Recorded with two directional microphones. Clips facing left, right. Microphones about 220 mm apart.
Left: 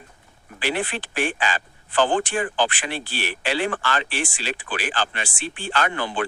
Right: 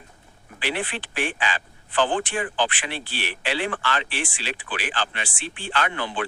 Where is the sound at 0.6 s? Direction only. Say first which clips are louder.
Left 3 dB; 45° left (ahead or behind).